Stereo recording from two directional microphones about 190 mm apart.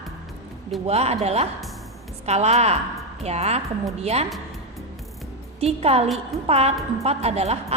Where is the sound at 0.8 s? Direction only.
35° right (ahead or behind).